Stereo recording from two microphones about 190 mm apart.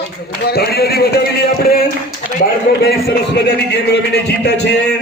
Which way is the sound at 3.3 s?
60° left (ahead or behind).